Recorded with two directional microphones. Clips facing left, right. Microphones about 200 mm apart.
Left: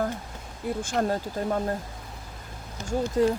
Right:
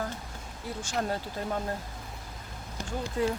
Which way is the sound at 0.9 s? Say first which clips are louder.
Left 4 dB; 40° left (ahead or behind).